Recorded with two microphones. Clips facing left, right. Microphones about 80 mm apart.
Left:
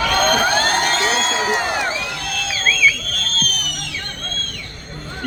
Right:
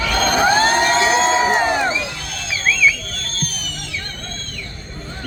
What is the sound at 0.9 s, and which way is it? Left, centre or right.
Crowd, right.